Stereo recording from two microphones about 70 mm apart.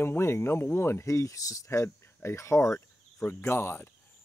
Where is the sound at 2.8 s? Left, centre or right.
Left.